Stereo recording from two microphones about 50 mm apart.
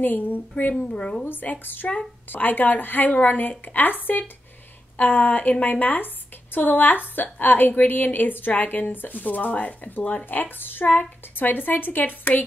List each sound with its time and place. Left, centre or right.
0.0 s a woman's voice: left
0.8 s speech: centre
1.2 s a woman's voice: left
4.9 s a woman's voice: left
10.2 s a woman's voice: left